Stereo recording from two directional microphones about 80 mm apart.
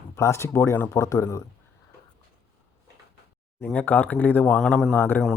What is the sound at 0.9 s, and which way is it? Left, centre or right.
Speech, left.